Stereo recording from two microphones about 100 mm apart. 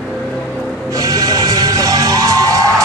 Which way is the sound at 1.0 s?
40° right (ahead or behind).